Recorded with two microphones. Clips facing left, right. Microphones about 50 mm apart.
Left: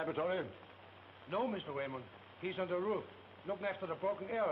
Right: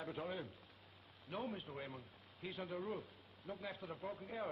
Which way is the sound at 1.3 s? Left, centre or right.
Left.